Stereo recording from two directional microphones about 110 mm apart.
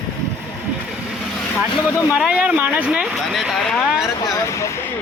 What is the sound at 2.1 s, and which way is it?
Speech, 10° right (ahead or behind).